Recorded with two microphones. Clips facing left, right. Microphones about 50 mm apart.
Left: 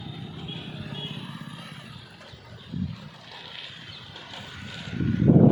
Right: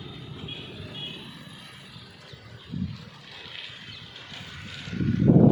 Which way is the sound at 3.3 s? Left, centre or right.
Centre.